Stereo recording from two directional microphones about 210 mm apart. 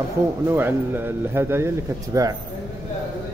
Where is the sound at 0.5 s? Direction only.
10° right (ahead or behind).